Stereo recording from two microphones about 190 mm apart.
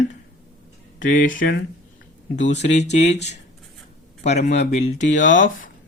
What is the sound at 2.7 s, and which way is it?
Speech, 35° left (ahead or behind).